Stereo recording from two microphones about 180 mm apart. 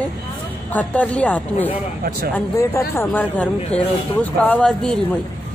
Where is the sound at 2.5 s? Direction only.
15° left (ahead or behind).